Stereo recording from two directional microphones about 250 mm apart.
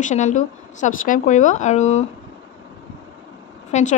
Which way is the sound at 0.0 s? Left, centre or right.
Left.